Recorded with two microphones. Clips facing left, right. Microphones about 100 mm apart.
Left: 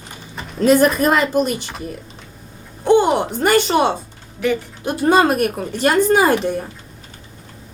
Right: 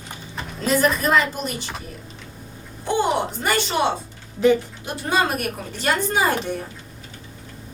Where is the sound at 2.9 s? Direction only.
55° left (ahead or behind).